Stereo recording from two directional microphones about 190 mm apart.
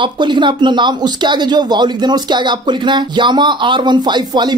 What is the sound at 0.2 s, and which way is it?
Speech, 25° right (ahead or behind).